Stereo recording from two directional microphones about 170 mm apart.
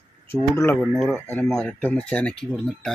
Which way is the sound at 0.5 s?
15° left (ahead or behind).